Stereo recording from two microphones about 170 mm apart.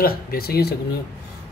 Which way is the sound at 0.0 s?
60° left (ahead or behind).